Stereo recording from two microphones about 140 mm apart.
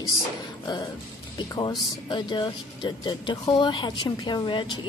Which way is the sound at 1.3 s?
30° left (ahead or behind).